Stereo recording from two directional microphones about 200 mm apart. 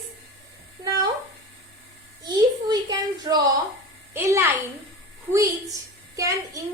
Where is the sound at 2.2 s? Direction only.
20° right (ahead or behind).